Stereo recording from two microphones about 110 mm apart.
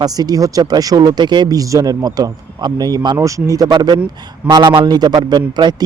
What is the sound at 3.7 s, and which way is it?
Speech, 45° right (ahead or behind).